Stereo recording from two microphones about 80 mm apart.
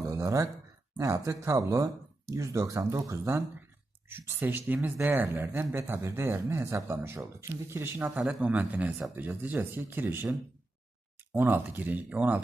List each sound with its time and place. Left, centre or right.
0.0 s a sound: right
0.9 s speech: right
4.1 s speech: right
11.3 s speech: right